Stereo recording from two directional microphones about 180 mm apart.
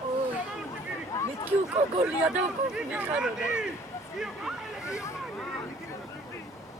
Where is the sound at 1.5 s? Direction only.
10° right (ahead or behind).